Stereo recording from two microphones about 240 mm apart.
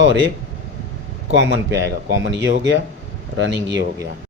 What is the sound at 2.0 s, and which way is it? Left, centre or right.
Speech, right.